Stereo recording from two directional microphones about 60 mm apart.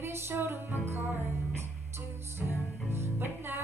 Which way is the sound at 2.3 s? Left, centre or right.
Right.